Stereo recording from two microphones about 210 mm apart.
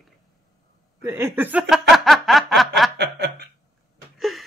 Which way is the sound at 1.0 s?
10° right (ahead or behind).